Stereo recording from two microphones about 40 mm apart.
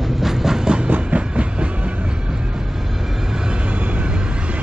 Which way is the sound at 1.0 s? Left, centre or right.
Right.